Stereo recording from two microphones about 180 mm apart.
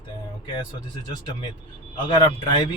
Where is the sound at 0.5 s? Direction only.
25° left (ahead or behind).